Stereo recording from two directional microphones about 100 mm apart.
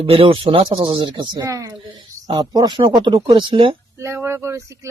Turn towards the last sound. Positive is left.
turn(degrees=-25)  # may be behind; listen again after turning